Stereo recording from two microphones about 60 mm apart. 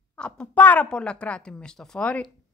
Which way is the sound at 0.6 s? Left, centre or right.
Left.